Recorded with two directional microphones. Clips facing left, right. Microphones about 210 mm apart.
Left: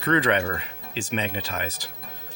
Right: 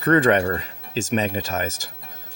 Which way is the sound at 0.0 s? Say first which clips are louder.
Right 5 dB; 45° right (ahead or behind).